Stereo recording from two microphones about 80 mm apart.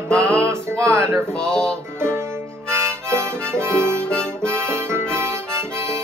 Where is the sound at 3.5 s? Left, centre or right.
Right.